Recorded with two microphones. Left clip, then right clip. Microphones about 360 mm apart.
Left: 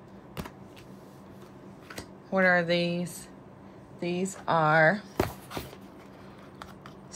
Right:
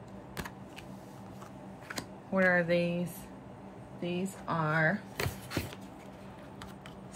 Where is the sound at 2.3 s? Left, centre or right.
Centre.